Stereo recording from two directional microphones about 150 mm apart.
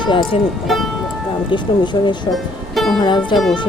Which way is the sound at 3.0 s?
30° left (ahead or behind).